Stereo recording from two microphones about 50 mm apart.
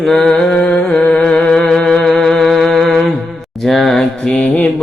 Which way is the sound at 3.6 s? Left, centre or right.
Centre.